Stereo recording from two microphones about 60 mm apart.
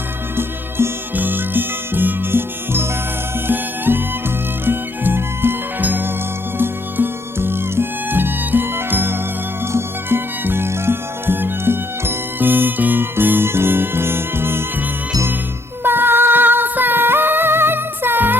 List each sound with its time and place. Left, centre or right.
0.3 s music: right
15.8 s music: right